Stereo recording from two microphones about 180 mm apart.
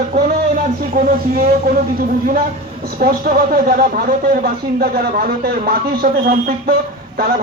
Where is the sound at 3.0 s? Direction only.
50° right (ahead or behind).